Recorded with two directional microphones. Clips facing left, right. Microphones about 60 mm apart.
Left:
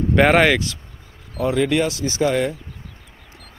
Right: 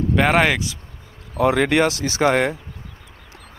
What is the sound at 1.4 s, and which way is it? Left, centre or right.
Speech, right.